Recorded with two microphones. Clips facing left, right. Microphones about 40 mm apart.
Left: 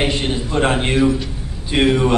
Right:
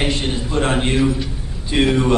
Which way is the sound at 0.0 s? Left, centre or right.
Centre.